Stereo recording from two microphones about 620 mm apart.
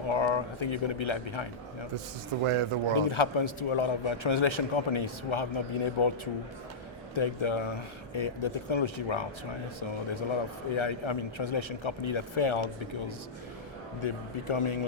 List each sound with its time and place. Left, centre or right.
0.1 s speech: left
2.4 s speech: right
2.9 s a man's voice: left
10.8 s a man's voice: left
14.0 s a man's voice: left